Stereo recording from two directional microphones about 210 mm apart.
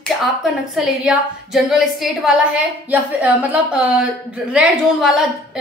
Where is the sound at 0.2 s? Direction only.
Centre (ahead or behind).